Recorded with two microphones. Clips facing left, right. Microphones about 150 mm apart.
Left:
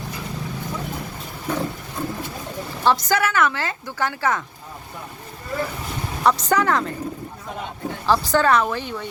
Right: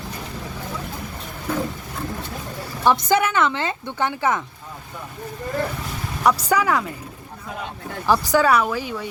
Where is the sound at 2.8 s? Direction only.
20° right (ahead or behind).